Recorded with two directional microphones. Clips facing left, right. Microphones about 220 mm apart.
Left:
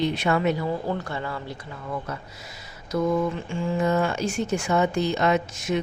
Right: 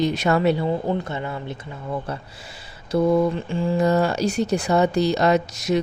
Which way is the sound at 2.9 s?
35° right (ahead or behind).